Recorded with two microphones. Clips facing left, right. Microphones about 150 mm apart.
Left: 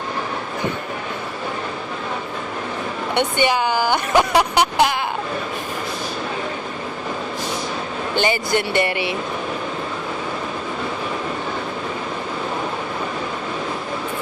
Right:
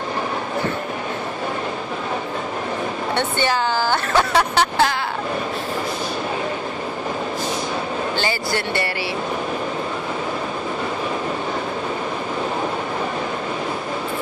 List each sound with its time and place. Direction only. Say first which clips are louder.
3.2 s speech: left 3 dB; 15° left (ahead or behind)
8.1 s speech: left 8 dB; 20° left (ahead or behind)